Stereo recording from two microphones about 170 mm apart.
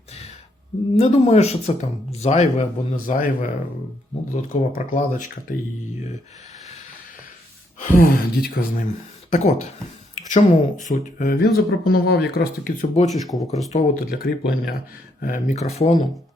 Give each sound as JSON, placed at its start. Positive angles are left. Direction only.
{"t": 0.9, "sound": "speech", "side_deg": 35}
{"t": 4.7, "sound": "speech", "side_deg": 50}
{"t": 7.8, "sound": "speech", "side_deg": 55}
{"t": 9.3, "sound": "speech", "side_deg": 45}
{"t": 13.2, "sound": "speech", "side_deg": 0}
{"t": 13.7, "sound": "speech", "side_deg": 60}